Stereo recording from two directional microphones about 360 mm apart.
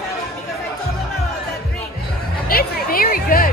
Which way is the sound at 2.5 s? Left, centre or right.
Left.